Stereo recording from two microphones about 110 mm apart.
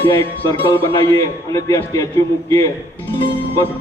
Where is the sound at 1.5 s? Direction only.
30° left (ahead or behind).